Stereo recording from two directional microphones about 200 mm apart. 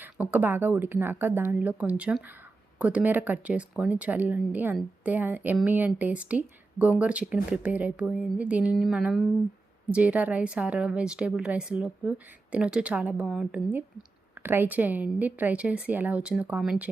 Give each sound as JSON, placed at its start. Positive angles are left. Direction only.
{"t": 0.0, "sound": "a woman's voice", "side_deg": -10}